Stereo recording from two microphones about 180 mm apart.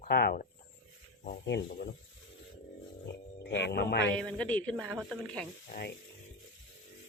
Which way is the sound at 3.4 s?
70° left (ahead or behind).